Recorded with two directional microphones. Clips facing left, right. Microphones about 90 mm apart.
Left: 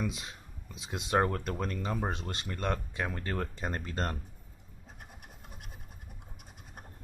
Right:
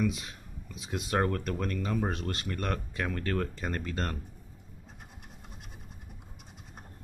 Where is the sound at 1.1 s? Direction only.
15° left (ahead or behind).